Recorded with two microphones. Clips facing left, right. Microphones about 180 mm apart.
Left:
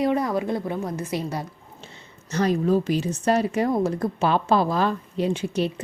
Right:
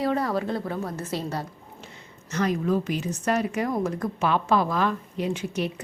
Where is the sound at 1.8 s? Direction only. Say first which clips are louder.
Even; 30° left (ahead or behind).